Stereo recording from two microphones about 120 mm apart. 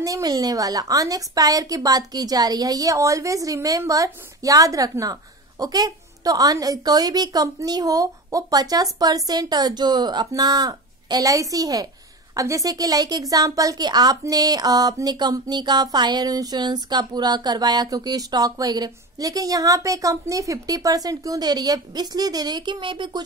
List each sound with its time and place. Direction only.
0.0 s a woman's voice: 30° right (ahead or behind)